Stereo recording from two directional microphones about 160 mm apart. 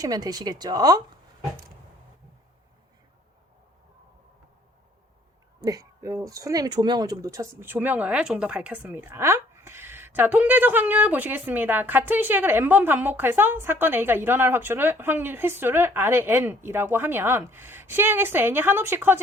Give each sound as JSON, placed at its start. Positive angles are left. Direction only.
{"t": 0.0, "sound": "speech", "side_deg": -25}
{"t": 5.5, "sound": "speech", "side_deg": -20}